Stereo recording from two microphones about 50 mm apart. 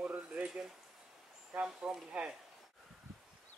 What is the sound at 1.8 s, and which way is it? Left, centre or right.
Speech, right.